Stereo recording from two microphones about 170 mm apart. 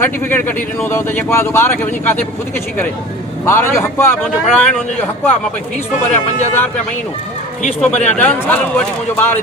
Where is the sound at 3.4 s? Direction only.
15° left (ahead or behind).